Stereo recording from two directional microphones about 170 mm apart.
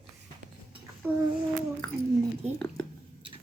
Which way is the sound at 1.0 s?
10° right (ahead or behind).